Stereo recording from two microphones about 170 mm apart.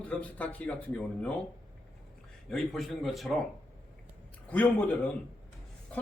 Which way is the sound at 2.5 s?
Centre (ahead or behind).